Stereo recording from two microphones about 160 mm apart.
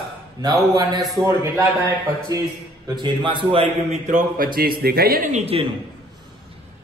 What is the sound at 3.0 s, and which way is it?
Speech, 30° right (ahead or behind).